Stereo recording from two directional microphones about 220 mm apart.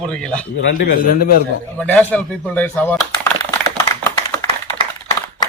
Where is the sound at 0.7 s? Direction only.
45° left (ahead or behind).